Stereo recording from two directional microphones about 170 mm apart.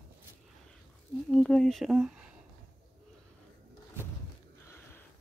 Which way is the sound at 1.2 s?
5° left (ahead or behind).